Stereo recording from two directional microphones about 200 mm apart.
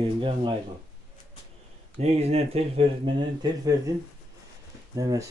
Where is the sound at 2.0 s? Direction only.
30° right (ahead or behind).